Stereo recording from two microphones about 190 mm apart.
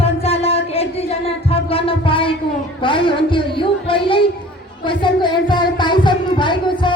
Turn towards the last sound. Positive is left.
turn(degrees=25)  # may be behind; listen again after turning